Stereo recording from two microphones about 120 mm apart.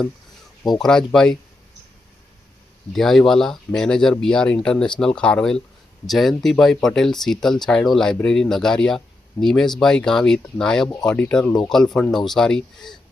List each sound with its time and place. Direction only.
0.6 s speech: centre (ahead or behind)
2.9 s speech: centre (ahead or behind)
10.8 s speech: 25° left (ahead or behind)
11.1 s speech: 10° left (ahead or behind)